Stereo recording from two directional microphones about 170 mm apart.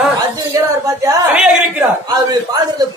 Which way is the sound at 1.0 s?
10° right (ahead or behind).